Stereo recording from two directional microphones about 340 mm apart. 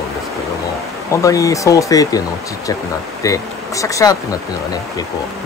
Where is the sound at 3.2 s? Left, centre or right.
Centre.